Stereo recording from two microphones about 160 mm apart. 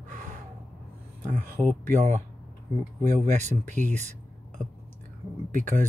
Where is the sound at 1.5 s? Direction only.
10° left (ahead or behind).